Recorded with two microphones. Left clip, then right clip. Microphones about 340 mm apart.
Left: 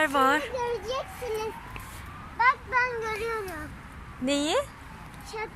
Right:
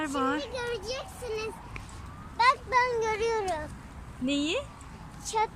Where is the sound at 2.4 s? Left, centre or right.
Centre.